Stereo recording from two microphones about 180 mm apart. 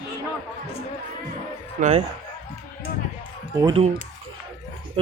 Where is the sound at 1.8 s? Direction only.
40° right (ahead or behind).